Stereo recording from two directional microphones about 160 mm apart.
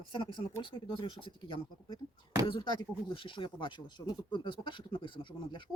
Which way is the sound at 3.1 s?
30° left (ahead or behind).